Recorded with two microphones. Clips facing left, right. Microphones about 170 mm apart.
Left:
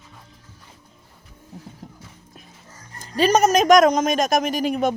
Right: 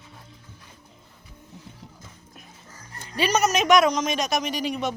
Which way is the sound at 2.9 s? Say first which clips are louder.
Left 6 dB; 40° left (ahead or behind).